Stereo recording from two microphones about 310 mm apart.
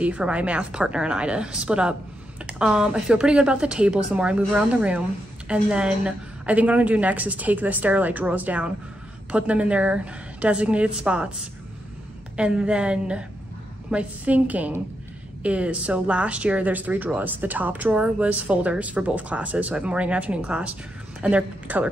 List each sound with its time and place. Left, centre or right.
0.0 s speech: centre
12.4 s a woman's voice: centre